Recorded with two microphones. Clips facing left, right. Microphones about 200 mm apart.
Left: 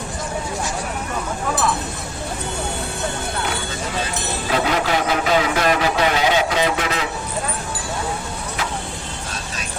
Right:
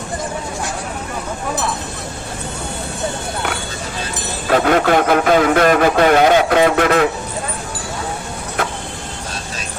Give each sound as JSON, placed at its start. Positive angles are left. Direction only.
{"t": 4.4, "sound": "speech", "side_deg": -55}